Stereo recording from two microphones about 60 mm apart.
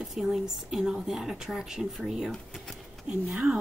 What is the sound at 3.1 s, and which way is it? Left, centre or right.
Speech, centre.